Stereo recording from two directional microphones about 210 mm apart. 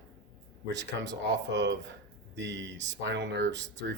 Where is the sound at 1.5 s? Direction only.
60° right (ahead or behind).